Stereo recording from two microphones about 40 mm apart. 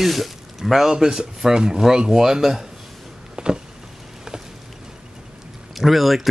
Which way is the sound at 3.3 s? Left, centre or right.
Centre.